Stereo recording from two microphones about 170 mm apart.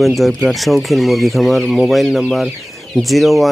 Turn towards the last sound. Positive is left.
turn(degrees=0)  # may be behind; listen again after turning